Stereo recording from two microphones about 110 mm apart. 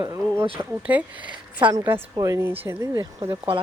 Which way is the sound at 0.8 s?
15° right (ahead or behind).